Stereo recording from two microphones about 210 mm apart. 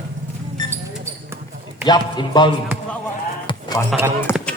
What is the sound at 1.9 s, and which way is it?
Speech, 20° left (ahead or behind).